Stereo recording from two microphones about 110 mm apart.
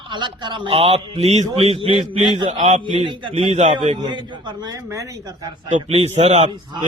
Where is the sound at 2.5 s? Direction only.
90° right.